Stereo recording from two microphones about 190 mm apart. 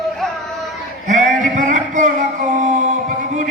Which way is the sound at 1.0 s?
40° right (ahead or behind).